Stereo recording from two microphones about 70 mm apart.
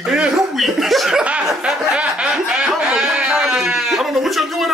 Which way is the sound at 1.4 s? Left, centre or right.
Centre.